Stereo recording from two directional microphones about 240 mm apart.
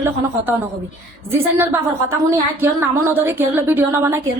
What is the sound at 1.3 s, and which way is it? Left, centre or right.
A woman's voice, centre.